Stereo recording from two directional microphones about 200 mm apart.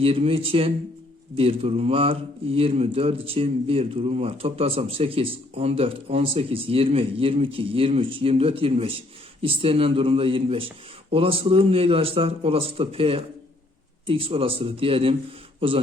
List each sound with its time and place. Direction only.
0.0 s a man's voice: 30° right (ahead or behind)